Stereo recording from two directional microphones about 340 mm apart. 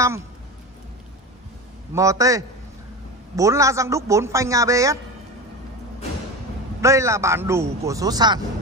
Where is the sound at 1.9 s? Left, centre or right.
Centre.